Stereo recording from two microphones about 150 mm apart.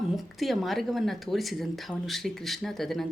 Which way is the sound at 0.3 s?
Centre (ahead or behind).